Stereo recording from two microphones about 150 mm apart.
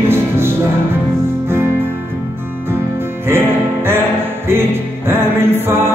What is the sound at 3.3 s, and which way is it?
Music, 15° right (ahead or behind).